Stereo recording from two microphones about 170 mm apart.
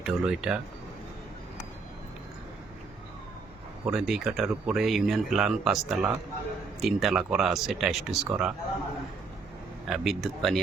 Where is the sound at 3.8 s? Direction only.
5° right (ahead or behind).